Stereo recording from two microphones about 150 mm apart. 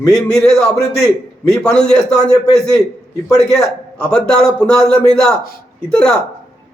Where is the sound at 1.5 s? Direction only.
5° left (ahead or behind).